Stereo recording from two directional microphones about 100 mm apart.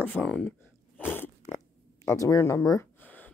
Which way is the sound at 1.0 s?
20° left (ahead or behind).